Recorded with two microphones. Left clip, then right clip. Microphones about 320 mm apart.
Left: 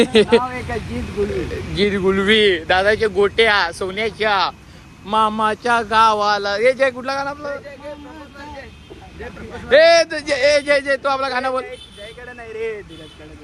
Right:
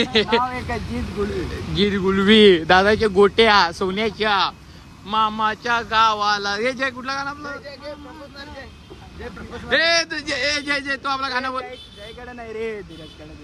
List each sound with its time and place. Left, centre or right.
0.0 s speech: centre
1.7 s speech: centre
9.6 s speech: centre
12.2 s speech: right